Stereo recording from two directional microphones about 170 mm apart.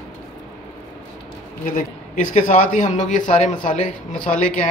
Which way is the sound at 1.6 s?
50° left (ahead or behind).